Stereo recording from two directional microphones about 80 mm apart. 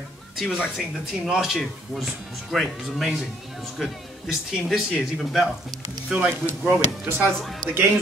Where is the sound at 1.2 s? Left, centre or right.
Centre.